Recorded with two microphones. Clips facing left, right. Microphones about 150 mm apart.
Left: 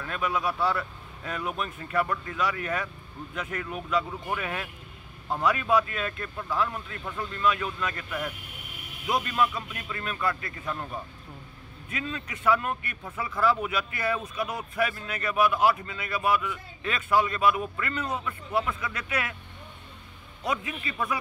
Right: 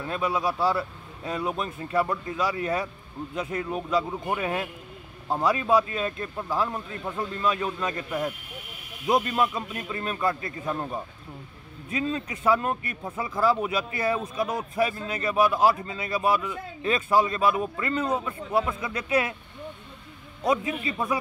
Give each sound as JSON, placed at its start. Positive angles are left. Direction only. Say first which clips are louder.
{"t": 0.0, "sound": "a man's voice", "louder": "right 3 dB", "side_deg": -30}
{"t": 13.1, "sound": "speech", "louder": "right 1 dB", "side_deg": -20}
{"t": 13.4, "sound": "a man's voice", "louder": "right 2 dB", "side_deg": -35}
{"t": 20.4, "sound": "a man's voice", "louder": "right 6 dB", "side_deg": -30}